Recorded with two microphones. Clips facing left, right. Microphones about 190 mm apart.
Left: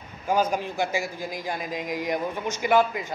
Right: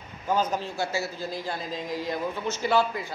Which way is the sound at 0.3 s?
10° left (ahead or behind).